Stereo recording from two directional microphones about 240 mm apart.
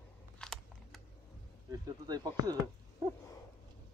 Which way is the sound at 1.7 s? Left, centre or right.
Centre.